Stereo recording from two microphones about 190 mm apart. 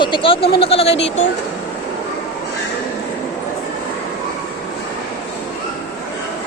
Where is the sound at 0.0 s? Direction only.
25° left (ahead or behind).